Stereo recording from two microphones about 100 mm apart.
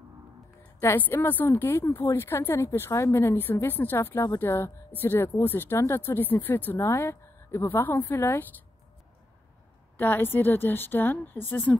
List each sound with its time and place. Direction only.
0.7 s a woman's voice: 20° left (ahead or behind)
9.9 s a woman's voice: 20° left (ahead or behind)